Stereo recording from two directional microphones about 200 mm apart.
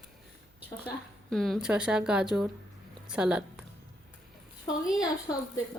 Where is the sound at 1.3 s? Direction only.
Centre (ahead or behind).